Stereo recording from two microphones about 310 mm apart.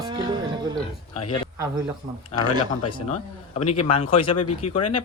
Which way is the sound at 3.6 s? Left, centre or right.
Left.